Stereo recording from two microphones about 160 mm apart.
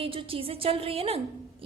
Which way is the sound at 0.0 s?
35° right (ahead or behind).